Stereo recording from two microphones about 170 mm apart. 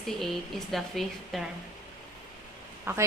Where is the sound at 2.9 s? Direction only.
15° right (ahead or behind).